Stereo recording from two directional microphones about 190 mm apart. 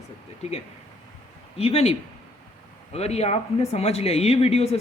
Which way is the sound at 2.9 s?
35° left (ahead or behind).